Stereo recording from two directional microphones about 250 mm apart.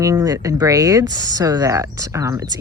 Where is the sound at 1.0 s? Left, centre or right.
Right.